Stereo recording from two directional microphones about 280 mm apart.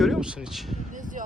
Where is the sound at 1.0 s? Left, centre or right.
Right.